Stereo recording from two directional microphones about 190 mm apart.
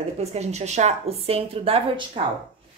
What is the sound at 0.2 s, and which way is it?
A woman's voice, 35° right (ahead or behind).